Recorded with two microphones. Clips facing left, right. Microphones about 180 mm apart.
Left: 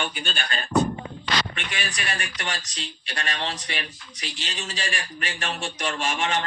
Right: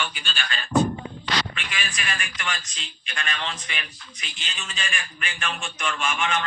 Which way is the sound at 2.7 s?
75° left (ahead or behind).